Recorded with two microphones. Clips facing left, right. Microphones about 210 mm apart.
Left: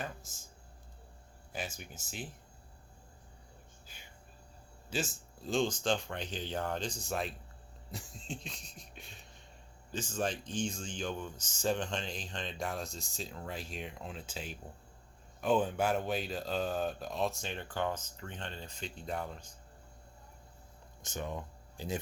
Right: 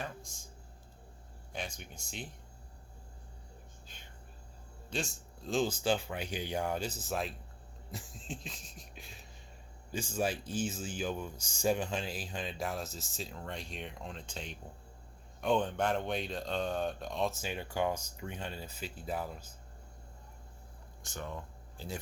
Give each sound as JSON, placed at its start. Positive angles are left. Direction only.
{"t": 0.0, "sound": "a sound", "side_deg": 0}
{"t": 1.5, "sound": "speech", "side_deg": 5}
{"t": 4.9, "sound": "speech", "side_deg": 5}
{"t": 21.0, "sound": "speech", "side_deg": 20}